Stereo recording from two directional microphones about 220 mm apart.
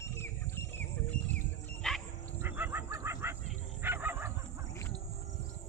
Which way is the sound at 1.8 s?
5° left (ahead or behind).